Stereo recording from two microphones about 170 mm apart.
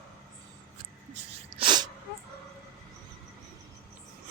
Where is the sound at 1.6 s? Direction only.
25° right (ahead or behind).